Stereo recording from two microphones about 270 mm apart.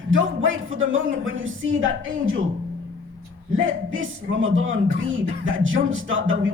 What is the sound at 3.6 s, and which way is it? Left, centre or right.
Speech, right.